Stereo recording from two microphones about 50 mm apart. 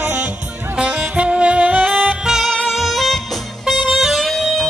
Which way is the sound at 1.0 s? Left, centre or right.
Right.